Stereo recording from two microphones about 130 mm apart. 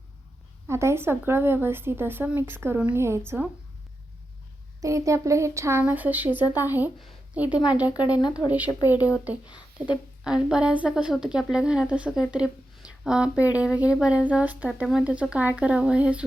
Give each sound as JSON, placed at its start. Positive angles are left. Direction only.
{"t": 0.7, "sound": "speech", "side_deg": -20}
{"t": 4.8, "sound": "speech", "side_deg": -25}
{"t": 7.9, "sound": "speech", "side_deg": 30}
{"t": 8.4, "sound": "speech", "side_deg": -10}
{"t": 8.8, "sound": "speech", "side_deg": 25}
{"t": 9.7, "sound": "speech", "side_deg": -10}